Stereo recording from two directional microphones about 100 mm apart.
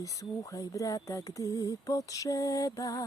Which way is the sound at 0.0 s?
35° left (ahead or behind).